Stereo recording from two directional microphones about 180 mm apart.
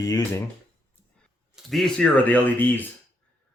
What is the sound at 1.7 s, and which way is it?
Speech, centre (ahead or behind).